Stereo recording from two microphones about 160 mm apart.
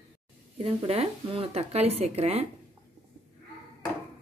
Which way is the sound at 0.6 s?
40° right (ahead or behind).